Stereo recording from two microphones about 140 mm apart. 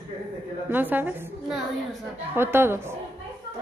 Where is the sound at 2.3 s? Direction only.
15° right (ahead or behind).